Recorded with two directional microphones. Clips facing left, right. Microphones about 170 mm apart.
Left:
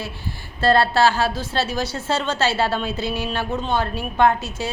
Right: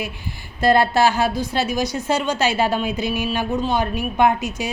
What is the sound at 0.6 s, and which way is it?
A woman's voice, 15° right (ahead or behind).